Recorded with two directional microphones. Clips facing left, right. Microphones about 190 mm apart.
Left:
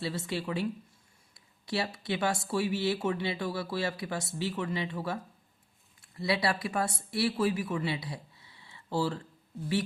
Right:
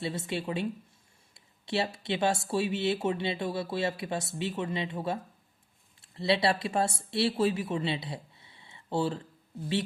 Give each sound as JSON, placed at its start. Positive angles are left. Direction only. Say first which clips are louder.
{"t": 0.0, "sound": "speech", "louder": "right 1 dB", "side_deg": -20}